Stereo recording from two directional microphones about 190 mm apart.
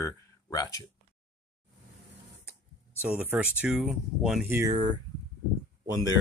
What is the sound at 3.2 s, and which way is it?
Speech, 5° right (ahead or behind).